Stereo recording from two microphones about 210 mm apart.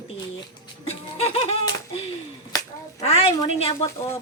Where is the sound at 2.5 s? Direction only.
15° left (ahead or behind).